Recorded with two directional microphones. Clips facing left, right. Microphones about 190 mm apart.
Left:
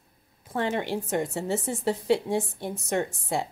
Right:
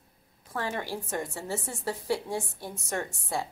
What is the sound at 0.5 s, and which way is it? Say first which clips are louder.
A woman's voice: left 5 dB; 20° left (ahead or behind).